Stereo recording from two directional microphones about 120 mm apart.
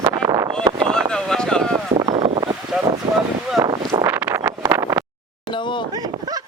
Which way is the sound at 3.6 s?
35° right (ahead or behind).